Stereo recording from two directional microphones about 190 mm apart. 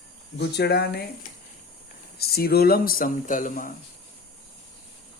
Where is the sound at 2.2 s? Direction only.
55° left (ahead or behind).